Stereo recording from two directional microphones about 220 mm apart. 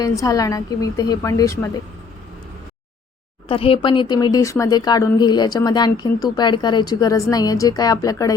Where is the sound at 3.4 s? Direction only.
25° left (ahead or behind).